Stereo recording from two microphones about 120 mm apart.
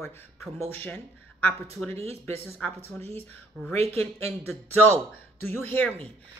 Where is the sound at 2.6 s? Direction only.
10° left (ahead or behind).